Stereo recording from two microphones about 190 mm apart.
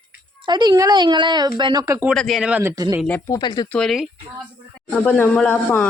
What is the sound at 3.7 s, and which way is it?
Speech, centre (ahead or behind).